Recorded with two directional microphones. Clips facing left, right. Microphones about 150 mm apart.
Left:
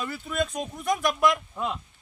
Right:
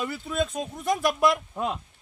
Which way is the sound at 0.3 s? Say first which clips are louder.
Even; centre (ahead or behind).